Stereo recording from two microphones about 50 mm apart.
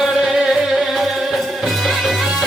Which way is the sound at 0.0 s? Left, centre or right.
Centre.